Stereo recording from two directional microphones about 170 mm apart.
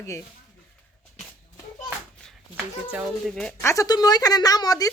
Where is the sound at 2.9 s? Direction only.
Centre (ahead or behind).